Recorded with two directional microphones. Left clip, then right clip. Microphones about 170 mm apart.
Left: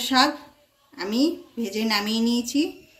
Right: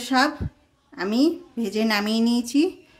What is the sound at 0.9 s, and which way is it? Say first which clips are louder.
A woman's voice: right 2 dB; 55° right (ahead or behind).